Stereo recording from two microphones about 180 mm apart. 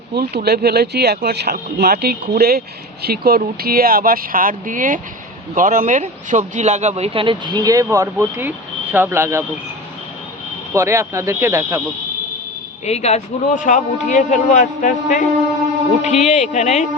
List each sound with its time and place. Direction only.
0.1 s speech: 60° right (ahead or behind); by 9.4 s 15° right (ahead or behind)
10.8 s speech: 15° right (ahead or behind)
12.8 s a man's voice: 35° left (ahead or behind)